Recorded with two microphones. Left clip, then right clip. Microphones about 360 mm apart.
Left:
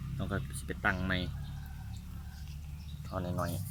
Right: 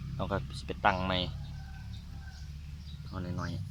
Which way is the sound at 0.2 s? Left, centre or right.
Centre.